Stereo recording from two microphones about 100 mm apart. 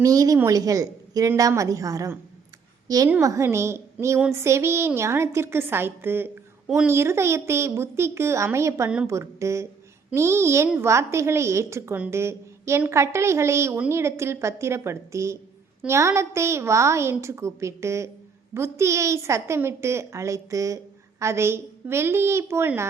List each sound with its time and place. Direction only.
0.0 s a woman's voice: 35° right (ahead or behind)